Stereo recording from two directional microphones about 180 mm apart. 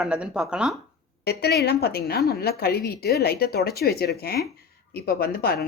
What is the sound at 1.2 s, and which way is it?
A woman's voice, 60° left (ahead or behind).